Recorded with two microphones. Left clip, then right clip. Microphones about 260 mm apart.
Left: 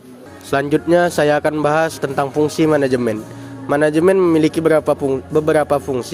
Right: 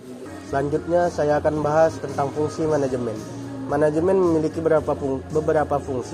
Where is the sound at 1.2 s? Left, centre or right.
Left.